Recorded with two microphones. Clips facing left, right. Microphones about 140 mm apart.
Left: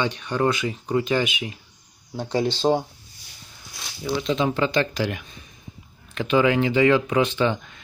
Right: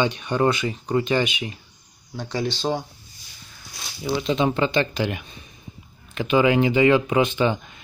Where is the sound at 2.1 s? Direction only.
25° left (ahead or behind).